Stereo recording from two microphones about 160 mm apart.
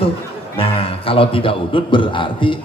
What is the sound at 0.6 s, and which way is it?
A man's voice, 35° left (ahead or behind).